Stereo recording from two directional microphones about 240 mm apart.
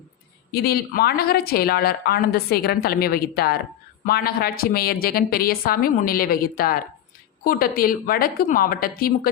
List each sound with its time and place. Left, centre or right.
0.5 s a woman's voice: left